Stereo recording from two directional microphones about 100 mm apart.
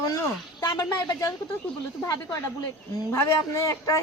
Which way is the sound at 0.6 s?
40° left (ahead or behind).